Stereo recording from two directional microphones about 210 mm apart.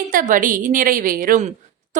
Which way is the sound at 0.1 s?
40° right (ahead or behind).